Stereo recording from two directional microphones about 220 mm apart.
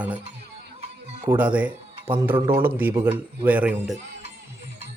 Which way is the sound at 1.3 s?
5° right (ahead or behind).